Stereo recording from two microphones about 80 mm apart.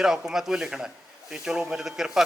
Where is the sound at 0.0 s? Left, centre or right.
Centre.